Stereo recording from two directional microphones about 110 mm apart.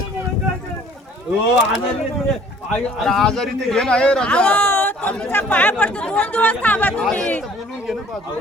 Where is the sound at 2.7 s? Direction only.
5° left (ahead or behind).